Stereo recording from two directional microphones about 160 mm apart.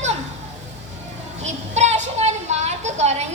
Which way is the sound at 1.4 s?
45° right (ahead or behind).